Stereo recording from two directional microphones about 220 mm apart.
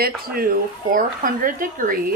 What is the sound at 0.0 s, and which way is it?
Speech, 45° right (ahead or behind).